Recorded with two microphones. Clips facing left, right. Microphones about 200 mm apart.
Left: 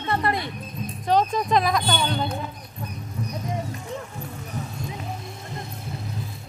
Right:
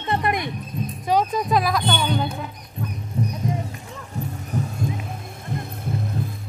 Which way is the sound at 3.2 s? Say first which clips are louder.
Right 7 dB; 30° right (ahead or behind).